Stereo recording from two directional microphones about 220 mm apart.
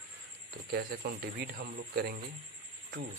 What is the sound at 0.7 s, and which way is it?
Speech, 45° right (ahead or behind).